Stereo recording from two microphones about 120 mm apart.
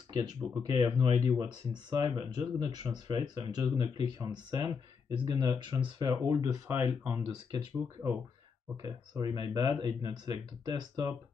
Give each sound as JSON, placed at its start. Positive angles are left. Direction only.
{"t": 0.2, "sound": "speech", "side_deg": -35}
{"t": 8.8, "sound": "speech", "side_deg": -35}